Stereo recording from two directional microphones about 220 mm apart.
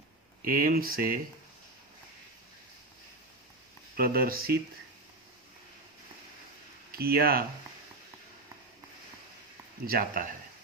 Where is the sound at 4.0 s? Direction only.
45° right (ahead or behind).